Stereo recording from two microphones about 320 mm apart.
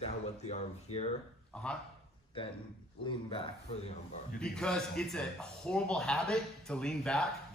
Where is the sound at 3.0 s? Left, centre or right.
Centre.